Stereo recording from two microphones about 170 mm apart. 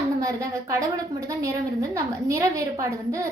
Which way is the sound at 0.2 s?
20° right (ahead or behind).